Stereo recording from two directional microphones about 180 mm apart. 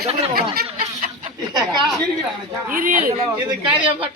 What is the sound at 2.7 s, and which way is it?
Speech, 50° right (ahead or behind).